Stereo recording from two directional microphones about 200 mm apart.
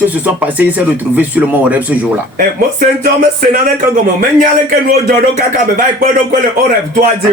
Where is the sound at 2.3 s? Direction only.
45° right (ahead or behind).